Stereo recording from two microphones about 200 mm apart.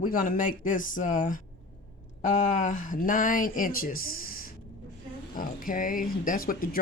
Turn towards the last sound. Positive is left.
turn(degrees=45)  # may be behind; listen again after turning